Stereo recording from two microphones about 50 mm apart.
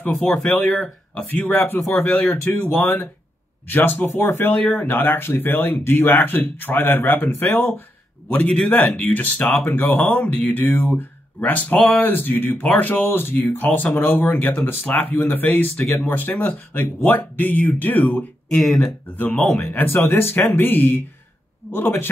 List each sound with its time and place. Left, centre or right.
0.2 s speech: left
2.0 s speech: left
9.7 s speech: left
10.7 s speech: left
18.6 s speech: centre
19.1 s speech: left
20.2 s speech: left